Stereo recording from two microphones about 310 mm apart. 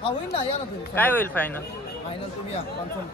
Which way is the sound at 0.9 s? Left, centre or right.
Centre.